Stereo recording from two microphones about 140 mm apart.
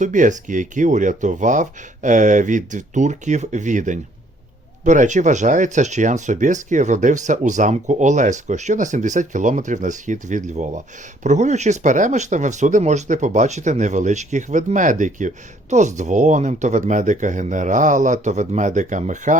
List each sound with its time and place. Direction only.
0.0 s speech: 65° right (ahead or behind)